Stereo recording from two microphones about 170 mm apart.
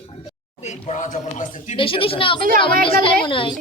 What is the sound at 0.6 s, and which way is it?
Speech, 45° left (ahead or behind).